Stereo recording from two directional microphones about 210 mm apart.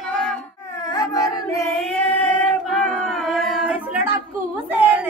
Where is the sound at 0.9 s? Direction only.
20° left (ahead or behind).